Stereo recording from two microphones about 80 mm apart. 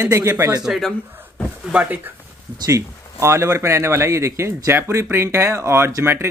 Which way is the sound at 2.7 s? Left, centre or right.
Right.